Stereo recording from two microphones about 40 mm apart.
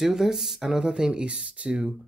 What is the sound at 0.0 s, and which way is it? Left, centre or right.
Speech, centre.